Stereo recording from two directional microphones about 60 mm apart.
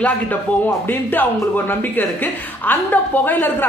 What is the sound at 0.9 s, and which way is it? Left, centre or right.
A woman's voice, left.